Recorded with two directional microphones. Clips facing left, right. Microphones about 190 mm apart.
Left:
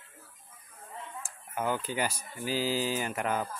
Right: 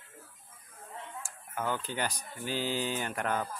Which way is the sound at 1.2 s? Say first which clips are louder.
Left 3 dB; 15° left (ahead or behind).